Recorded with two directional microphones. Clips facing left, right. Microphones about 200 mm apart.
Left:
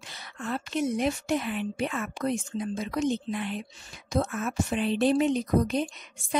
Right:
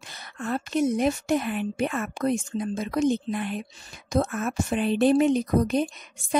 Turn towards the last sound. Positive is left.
turn(degrees=-45)  # may be behind; listen again after turning